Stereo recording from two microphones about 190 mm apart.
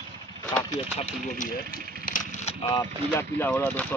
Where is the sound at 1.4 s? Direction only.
45° left (ahead or behind).